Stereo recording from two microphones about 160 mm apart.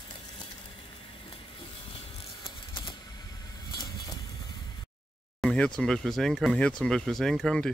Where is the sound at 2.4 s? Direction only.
35° left (ahead or behind).